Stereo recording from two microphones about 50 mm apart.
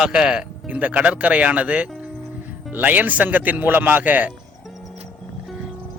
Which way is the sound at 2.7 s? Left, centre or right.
Right.